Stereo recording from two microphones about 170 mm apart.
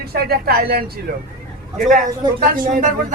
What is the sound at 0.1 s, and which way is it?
Speech, 65° right (ahead or behind).